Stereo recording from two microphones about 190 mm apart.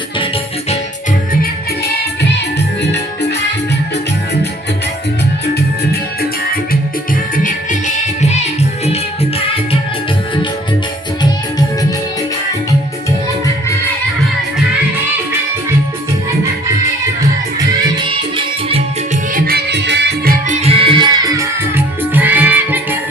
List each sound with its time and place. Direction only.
2.8 s music: 65° left (ahead or behind)
7.3 s music: 40° left (ahead or behind)
17.7 s music: 25° right (ahead or behind)
19.3 s music: 50° right (ahead or behind)
20.6 s music: 30° right (ahead or behind); by 23.0 s 10° right (ahead or behind)